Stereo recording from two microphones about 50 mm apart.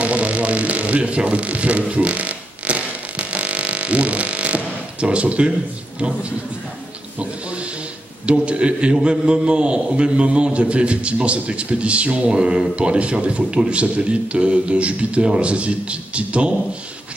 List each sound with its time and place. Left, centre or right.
0.0 s didgeridoo: right
5.0 s a man's voice: right
8.3 s a man's voice: right